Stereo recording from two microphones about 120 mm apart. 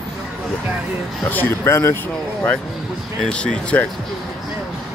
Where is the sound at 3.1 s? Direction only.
5° left (ahead or behind).